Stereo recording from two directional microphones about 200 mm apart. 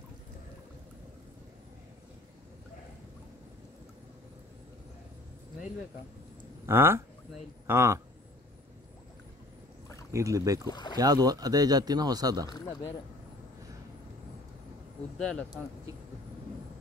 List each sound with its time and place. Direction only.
6.6 s speech: 10° right (ahead or behind)
10.1 s speech: 15° right (ahead or behind)
10.7 s speech: 20° left (ahead or behind)
11.0 s speech: 20° right (ahead or behind)
12.4 s speech: 20° left (ahead or behind)
15.1 s speech: 5° left (ahead or behind)